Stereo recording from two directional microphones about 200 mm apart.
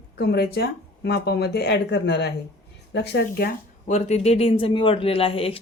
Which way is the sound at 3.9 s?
35° left (ahead or behind).